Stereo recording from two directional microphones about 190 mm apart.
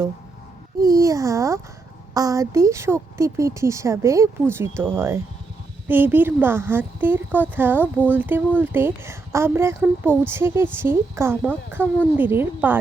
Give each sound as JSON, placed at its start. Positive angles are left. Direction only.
{"t": 0.8, "sound": "speech", "side_deg": -20}